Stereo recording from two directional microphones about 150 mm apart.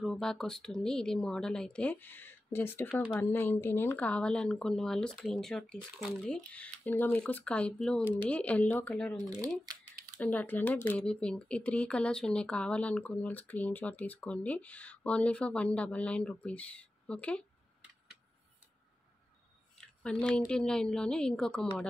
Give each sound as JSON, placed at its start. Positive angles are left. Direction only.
{"t": 0.0, "sound": "speech", "side_deg": 5}
{"t": 2.9, "sound": "speech", "side_deg": -5}
{"t": 3.2, "sound": "speech", "side_deg": 15}
{"t": 9.2, "sound": "speech", "side_deg": -25}
{"t": 10.1, "sound": "speech", "side_deg": 10}
{"t": 19.8, "sound": "speech", "side_deg": 5}